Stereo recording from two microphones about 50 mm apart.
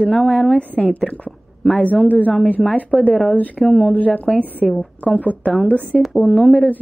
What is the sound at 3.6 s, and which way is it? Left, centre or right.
Speech, centre.